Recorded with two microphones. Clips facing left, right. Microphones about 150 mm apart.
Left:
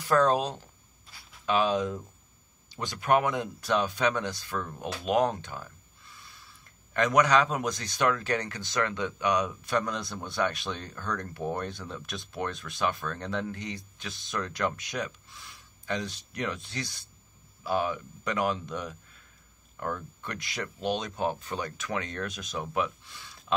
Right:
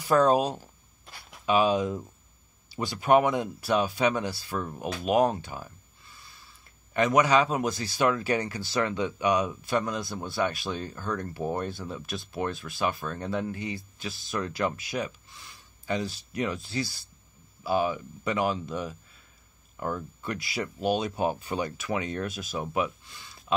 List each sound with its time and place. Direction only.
0.0 s speech: 10° right (ahead or behind)
1.0 s a sound: 65° right (ahead or behind)
1.4 s speech: 10° right (ahead or behind)